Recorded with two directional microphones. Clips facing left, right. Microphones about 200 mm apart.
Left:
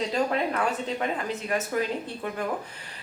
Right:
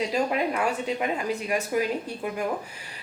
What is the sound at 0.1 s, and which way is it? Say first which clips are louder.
A woman's voice: right 1 dB; 10° right (ahead or behind).